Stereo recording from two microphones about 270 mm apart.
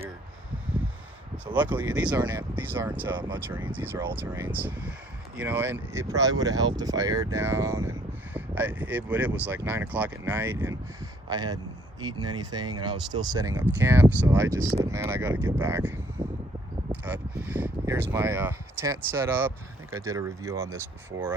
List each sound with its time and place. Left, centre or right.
1.5 s speech: centre